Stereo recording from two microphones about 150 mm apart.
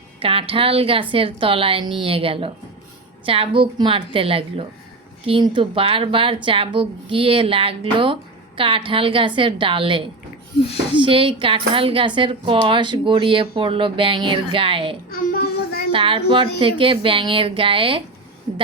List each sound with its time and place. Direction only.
0.2 s speech: 35° right (ahead or behind)
15.1 s child singing: 80° left
15.9 s speech: 35° right (ahead or behind)